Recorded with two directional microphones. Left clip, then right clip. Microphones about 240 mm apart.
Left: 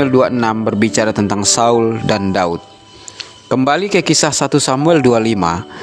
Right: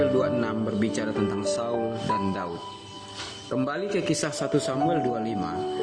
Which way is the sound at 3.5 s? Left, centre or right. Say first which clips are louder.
Left 14 dB; left.